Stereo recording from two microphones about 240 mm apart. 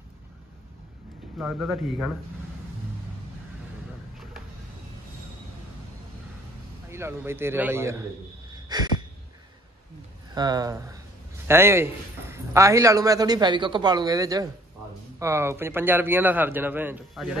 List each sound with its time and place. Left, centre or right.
1.4 s a man's voice: centre
6.9 s a man's voice: centre
8.6 s a sound: centre
10.3 s a man's voice: centre